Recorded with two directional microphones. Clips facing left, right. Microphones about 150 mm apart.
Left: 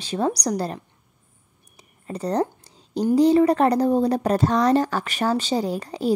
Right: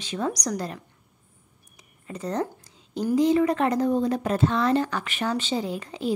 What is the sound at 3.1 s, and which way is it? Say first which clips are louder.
A woman's voice: left 4 dB; 35° left (ahead or behind).